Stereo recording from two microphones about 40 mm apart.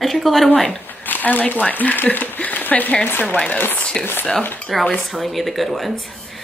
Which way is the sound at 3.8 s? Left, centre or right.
Left.